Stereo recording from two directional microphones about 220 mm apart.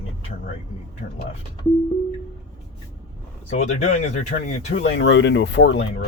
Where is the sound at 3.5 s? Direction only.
30° left (ahead or behind).